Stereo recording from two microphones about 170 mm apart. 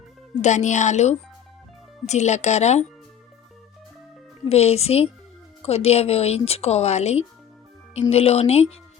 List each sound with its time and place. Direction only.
0.4 s speech: 45° left (ahead or behind)
4.4 s speech: 35° left (ahead or behind)